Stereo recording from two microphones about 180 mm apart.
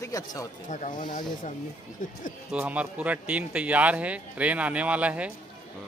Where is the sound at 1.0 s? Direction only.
50° left (ahead or behind).